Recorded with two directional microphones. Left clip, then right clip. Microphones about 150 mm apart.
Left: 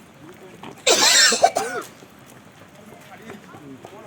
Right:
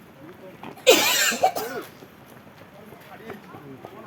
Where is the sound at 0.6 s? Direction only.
20° left (ahead or behind).